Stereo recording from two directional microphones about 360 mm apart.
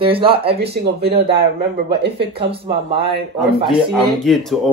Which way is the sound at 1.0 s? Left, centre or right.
Right.